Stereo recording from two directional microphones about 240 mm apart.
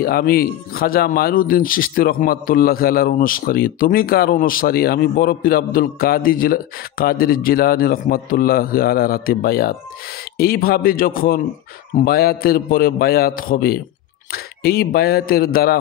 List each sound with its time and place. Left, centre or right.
0.0 s speech: left